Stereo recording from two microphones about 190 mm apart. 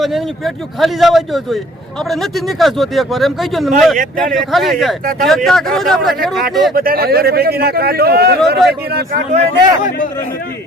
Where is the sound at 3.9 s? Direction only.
45° right (ahead or behind).